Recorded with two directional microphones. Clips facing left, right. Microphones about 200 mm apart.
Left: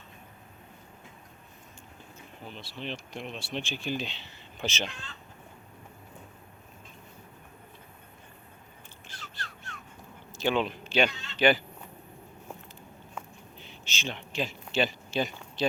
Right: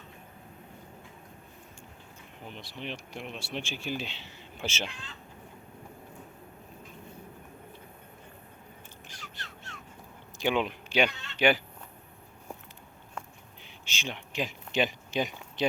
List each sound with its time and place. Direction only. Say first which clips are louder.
2.5 s speech: left 1 dB; 15° right (ahead or behind)
9.0 s a sound: left 4 dB; 15° right (ahead or behind)
10.3 s speech: left 1 dB; 15° right (ahead or behind)
11.1 s speech: left 1 dB; 60° right (ahead or behind)
11.3 s speech: left 1 dB; 10° right (ahead or behind)
13.6 s a sound: left 2 dB; 10° right (ahead or behind)